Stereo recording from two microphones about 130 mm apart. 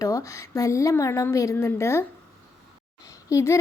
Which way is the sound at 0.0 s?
25° left (ahead or behind).